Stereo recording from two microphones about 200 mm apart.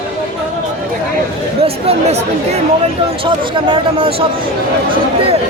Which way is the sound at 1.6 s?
30° right (ahead or behind).